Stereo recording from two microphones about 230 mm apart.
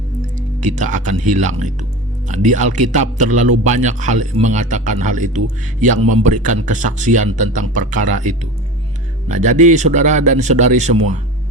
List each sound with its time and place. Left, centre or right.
0.3 s a man's voice: right